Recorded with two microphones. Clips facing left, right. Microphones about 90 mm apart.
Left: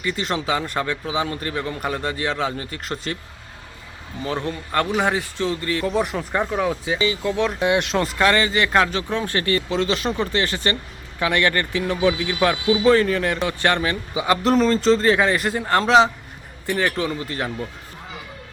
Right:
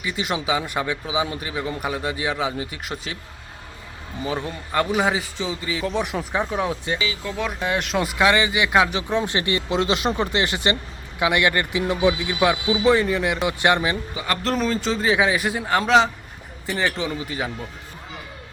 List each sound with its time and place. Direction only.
0.0 s a man's voice: 10° right (ahead or behind)
4.2 s a man's voice: 10° right (ahead or behind)
14.1 s speech: 15° left (ahead or behind)
14.4 s speech: 5° right (ahead or behind)
17.0 s a man's voice: 10° right (ahead or behind)